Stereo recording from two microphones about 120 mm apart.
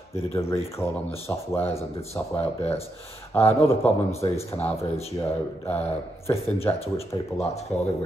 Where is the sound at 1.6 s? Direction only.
55° left (ahead or behind).